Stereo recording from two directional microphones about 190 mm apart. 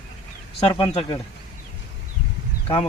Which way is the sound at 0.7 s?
25° left (ahead or behind).